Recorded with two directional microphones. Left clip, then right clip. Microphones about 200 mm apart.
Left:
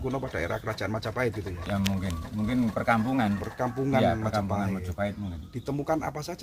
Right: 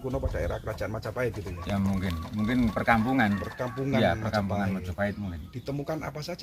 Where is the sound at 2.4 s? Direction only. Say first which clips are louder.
Right 1 dB; 5° left (ahead or behind).